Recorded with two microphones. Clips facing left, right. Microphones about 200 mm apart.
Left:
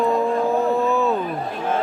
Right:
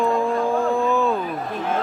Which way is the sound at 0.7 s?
5° left (ahead or behind).